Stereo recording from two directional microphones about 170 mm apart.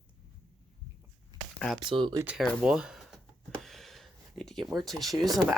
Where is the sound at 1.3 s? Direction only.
25° right (ahead or behind).